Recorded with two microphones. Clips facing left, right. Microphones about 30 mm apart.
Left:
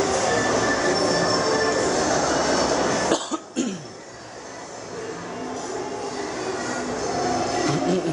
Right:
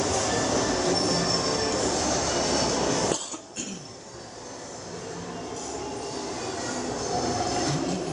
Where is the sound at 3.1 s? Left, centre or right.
Left.